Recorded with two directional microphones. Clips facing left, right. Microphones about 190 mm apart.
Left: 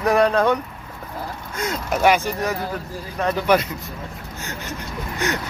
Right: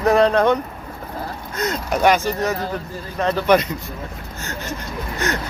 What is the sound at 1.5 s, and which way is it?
Speech, 5° left (ahead or behind).